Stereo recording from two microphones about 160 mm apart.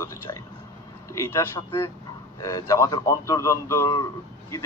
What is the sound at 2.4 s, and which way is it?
A man's voice, 20° left (ahead or behind).